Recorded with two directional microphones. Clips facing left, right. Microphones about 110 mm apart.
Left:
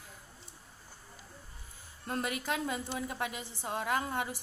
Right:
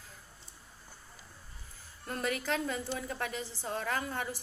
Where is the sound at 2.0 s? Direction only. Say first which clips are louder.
Right 1 dB; 25° left (ahead or behind).